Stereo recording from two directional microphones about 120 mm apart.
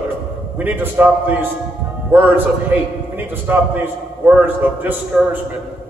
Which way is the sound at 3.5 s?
15° right (ahead or behind).